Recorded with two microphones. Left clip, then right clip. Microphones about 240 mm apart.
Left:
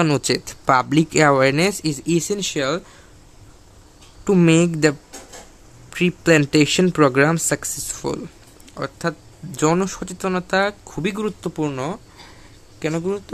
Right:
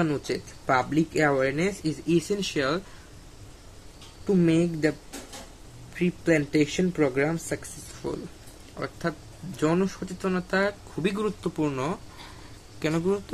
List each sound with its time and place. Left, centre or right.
0.0 s speech: left
4.3 s speech: left
5.9 s a man's voice: left; by 13.2 s centre